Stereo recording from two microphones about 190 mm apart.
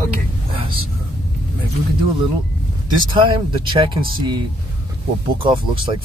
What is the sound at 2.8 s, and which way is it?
Speech, 25° right (ahead or behind).